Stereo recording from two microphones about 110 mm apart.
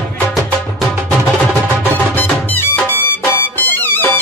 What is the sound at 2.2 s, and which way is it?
Music, 20° left (ahead or behind).